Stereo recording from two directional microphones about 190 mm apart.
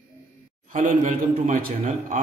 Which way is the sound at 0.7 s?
40° right (ahead or behind).